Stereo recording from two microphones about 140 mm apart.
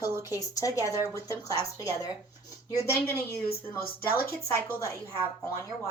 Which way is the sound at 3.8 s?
90° left.